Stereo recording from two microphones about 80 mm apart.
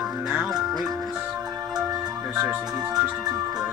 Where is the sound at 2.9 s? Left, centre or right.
Right.